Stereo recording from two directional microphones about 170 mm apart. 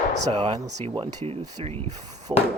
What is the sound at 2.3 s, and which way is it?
Speech, 25° right (ahead or behind).